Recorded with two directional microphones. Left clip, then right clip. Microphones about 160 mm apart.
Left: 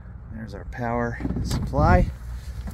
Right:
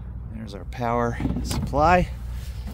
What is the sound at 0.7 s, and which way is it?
Speech, 25° right (ahead or behind).